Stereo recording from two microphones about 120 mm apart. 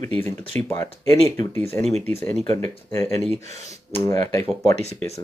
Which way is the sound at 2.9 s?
25° left (ahead or behind).